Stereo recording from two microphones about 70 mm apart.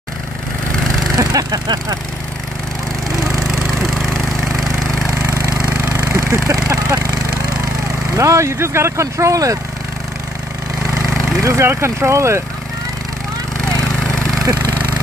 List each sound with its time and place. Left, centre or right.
1.1 s speech: right
3.9 s a sound: centre
4.5 s engine: centre
5.6 s engine: right
5.9 s a sound: right
8.1 s speech: right
11.4 s speech: right
14.0 s vehicle: centre